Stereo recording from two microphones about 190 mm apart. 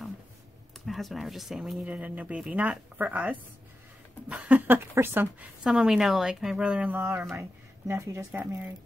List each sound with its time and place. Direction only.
0.8 s a woman's voice: centre (ahead or behind)